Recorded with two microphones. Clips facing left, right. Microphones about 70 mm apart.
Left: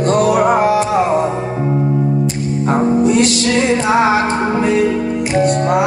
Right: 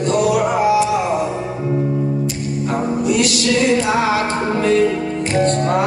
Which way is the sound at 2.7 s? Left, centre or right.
Left.